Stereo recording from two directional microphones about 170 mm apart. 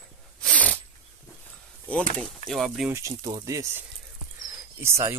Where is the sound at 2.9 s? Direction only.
20° right (ahead or behind).